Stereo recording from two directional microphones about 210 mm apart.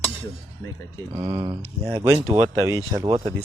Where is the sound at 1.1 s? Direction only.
25° right (ahead or behind).